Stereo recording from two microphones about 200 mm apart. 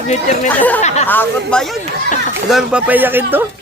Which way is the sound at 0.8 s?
35° left (ahead or behind).